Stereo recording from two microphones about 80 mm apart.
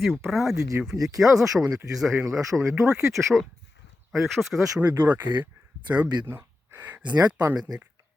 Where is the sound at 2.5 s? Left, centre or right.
Right.